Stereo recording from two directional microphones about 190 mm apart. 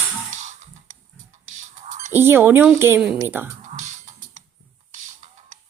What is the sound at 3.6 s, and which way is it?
Music, 40° right (ahead or behind).